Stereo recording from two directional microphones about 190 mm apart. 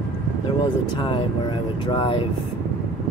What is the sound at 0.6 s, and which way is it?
Speech, 25° left (ahead or behind).